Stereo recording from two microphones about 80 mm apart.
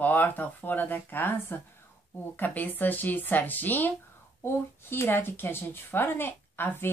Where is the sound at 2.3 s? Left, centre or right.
Left.